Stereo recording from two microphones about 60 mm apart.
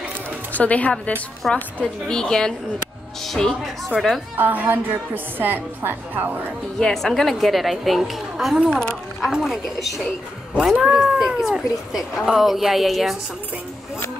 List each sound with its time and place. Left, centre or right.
0.5 s a woman's voice: left; by 4.2 s centre
4.4 s a woman's voice: right
6.8 s a woman's voice: centre
8.6 s speech: centre
9.2 s a woman's voice: centre